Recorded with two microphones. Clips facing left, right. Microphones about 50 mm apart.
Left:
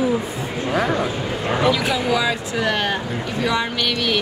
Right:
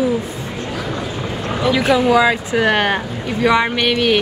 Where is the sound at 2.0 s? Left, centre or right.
Right.